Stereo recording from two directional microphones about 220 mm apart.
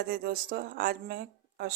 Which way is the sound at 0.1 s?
40° right (ahead or behind).